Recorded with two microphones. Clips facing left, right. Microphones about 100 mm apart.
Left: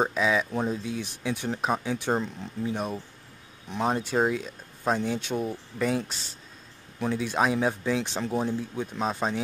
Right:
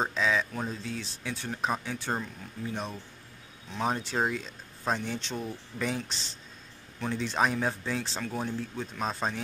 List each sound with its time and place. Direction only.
0.0 s speech: 10° left (ahead or behind)
7.0 s speech: 10° left (ahead or behind)
8.0 s speech: 20° left (ahead or behind)